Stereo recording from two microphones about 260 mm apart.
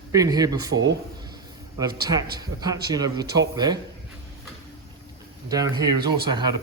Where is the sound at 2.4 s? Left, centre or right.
Centre.